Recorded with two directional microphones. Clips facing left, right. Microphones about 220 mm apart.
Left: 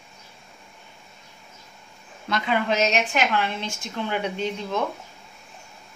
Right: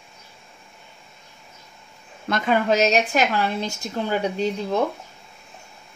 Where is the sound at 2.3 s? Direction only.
45° right (ahead or behind).